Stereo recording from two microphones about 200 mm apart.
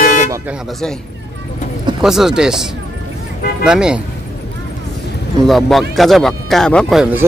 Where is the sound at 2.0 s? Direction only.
Centre (ahead or behind).